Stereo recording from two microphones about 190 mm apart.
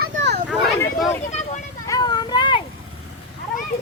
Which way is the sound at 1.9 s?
20° left (ahead or behind).